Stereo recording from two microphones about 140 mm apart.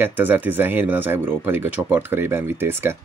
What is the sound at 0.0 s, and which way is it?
Speech, 15° right (ahead or behind).